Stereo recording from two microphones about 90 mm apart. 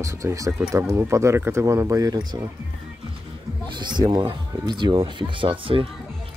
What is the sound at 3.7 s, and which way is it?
Speech, 55° right (ahead or behind).